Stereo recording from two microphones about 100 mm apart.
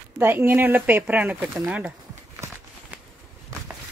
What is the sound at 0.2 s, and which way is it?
Speech, 20° right (ahead or behind).